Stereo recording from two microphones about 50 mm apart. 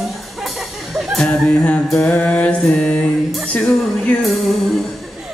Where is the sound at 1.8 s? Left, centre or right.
Centre.